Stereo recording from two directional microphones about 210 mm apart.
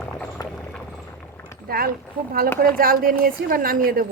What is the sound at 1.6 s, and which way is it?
Speech, 45° right (ahead or behind).